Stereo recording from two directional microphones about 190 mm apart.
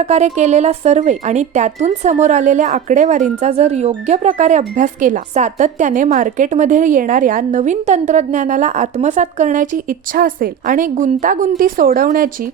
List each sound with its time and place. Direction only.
0.0 s speech: 35° right (ahead or behind)